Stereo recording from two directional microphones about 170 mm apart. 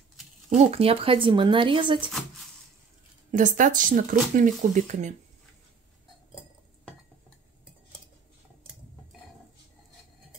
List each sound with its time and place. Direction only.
0.6 s speech: 35° right (ahead or behind)
2.0 s speech: 5° right (ahead or behind)
3.3 s speech: 50° right (ahead or behind)